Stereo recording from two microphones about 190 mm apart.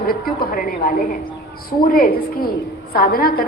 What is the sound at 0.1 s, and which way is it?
A woman's voice, 50° left (ahead or behind).